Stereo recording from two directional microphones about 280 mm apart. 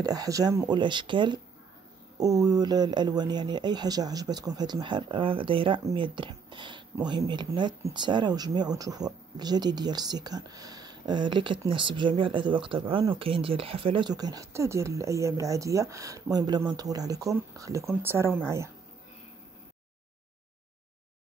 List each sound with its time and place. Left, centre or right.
0.0 s speech: centre